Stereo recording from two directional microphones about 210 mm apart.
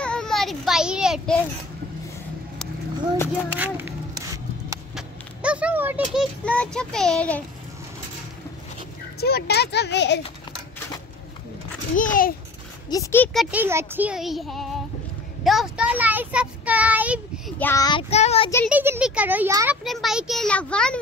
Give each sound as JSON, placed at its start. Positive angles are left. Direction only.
{"t": 0.0, "sound": "child singing", "side_deg": 5}
{"t": 3.5, "sound": "a sound", "side_deg": -10}
{"t": 6.4, "sound": "a child's voice", "side_deg": 5}
{"t": 9.2, "sound": "speech", "side_deg": 50}
{"t": 12.0, "sound": "a child's voice", "side_deg": 40}
{"t": 12.9, "sound": "a child's voice", "side_deg": 10}
{"t": 17.6, "sound": "child singing", "side_deg": 15}
{"t": 18.1, "sound": "a child's voice", "side_deg": 30}
{"t": 18.7, "sound": "a child's voice", "side_deg": -5}